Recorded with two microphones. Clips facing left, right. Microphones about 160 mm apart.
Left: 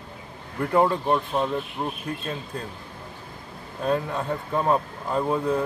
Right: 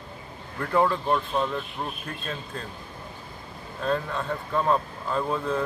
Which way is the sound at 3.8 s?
15° left (ahead or behind).